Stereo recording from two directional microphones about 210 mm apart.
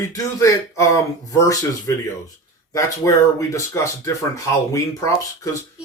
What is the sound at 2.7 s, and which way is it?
Speech, 15° left (ahead or behind).